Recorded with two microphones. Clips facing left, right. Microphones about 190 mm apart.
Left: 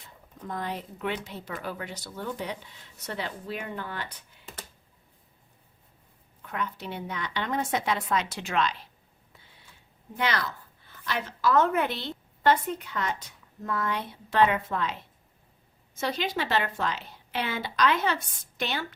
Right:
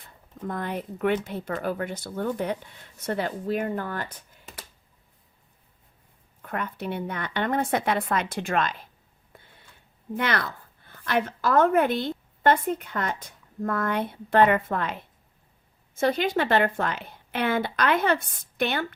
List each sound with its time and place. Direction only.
0.0 s speech: 55° right (ahead or behind)
6.4 s speech: 55° right (ahead or behind)
9.3 s a sound: 55° right (ahead or behind)
10.2 s a woman's voice: 55° right (ahead or behind)